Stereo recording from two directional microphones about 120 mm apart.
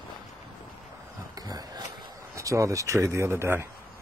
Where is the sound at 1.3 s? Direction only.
35° right (ahead or behind).